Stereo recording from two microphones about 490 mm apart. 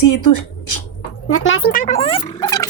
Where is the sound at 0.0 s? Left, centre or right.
Left.